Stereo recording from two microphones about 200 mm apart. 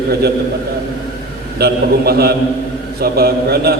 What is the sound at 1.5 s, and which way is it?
A man's voice, 55° right (ahead or behind).